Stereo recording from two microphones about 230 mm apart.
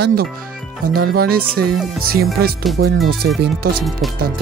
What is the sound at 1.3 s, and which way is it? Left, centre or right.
Speech, right.